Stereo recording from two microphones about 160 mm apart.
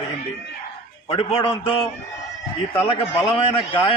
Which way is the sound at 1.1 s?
35° left (ahead or behind).